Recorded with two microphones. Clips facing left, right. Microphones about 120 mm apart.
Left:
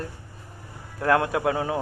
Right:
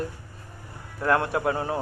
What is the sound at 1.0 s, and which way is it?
Speech, 70° left (ahead or behind).